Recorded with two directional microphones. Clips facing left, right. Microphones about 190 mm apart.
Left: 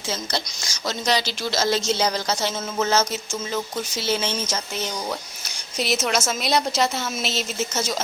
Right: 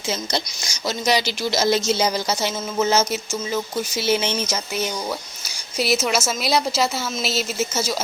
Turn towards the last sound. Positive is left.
turn(degrees=-5)  # may be behind; listen again after turning